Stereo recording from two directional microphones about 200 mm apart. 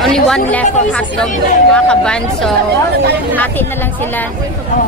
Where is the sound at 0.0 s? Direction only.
5° left (ahead or behind).